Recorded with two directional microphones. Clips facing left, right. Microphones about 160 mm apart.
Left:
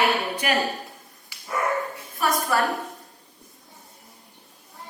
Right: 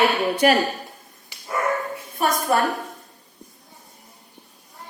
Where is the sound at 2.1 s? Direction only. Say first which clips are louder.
Right 3 dB; 20° right (ahead or behind).